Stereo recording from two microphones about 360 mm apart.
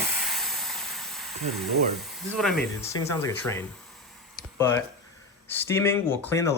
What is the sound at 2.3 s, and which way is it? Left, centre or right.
Speech, centre.